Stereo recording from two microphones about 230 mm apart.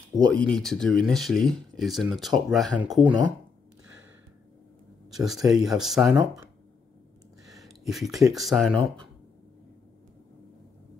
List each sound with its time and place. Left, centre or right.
0.3 s speech: centre
5.1 s speech: centre
7.5 s speech: centre